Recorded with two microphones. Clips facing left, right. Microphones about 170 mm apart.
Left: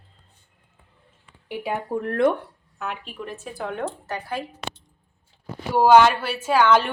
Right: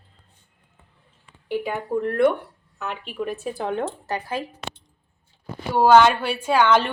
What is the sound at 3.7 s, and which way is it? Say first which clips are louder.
Speech: right 2 dB; 25° right (ahead or behind).